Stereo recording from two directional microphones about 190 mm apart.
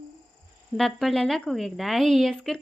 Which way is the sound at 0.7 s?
Centre (ahead or behind).